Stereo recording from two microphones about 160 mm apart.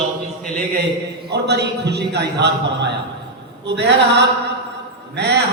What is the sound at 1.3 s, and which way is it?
Singing, 90° right.